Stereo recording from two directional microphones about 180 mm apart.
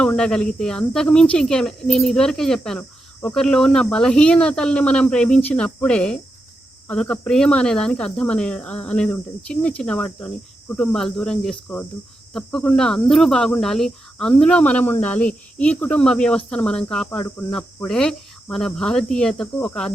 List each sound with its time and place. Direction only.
0.0 s speech: 5° left (ahead or behind)